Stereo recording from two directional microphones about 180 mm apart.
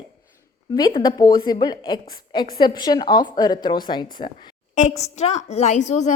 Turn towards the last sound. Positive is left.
turn(degrees=40)  # may be behind; listen again after turning